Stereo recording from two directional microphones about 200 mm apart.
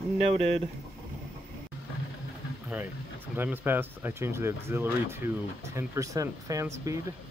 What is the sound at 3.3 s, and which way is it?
Speech, 10° right (ahead or behind).